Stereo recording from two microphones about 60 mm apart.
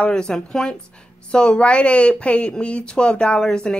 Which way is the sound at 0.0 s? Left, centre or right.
Centre.